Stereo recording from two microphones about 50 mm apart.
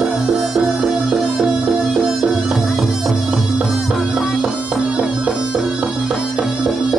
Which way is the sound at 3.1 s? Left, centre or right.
Right.